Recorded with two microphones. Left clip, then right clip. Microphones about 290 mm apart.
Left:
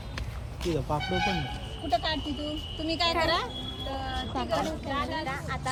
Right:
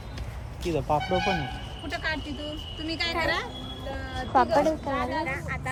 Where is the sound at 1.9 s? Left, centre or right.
Centre.